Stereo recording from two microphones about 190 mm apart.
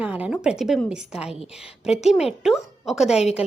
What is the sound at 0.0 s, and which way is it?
A woman's voice, 5° right (ahead or behind).